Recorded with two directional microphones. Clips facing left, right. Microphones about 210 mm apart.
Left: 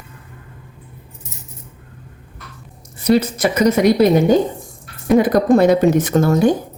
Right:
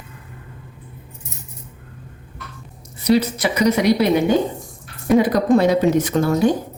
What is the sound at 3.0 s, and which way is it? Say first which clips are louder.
Speech: left 2 dB; 50° left (ahead or behind).